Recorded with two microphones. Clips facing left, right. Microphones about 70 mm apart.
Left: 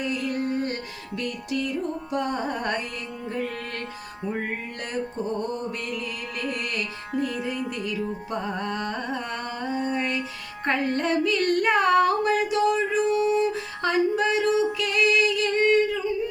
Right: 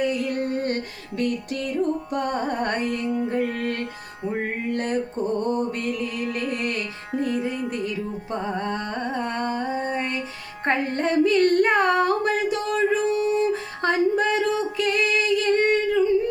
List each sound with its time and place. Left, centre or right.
0.3 s music: right
5.5 s music: right
10.7 s female singing: right